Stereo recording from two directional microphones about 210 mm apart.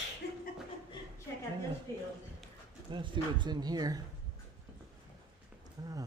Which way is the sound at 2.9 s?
20° right (ahead or behind).